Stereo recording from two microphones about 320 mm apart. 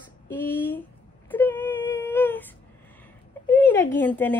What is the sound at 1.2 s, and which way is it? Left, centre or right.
Whimper, centre.